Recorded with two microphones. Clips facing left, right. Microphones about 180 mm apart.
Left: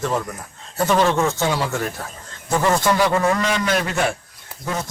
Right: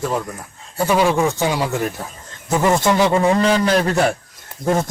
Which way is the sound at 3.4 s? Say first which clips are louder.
Right 5 dB; 30° right (ahead or behind).